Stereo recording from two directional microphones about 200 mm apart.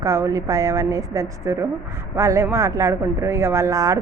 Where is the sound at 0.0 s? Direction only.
15° right (ahead or behind).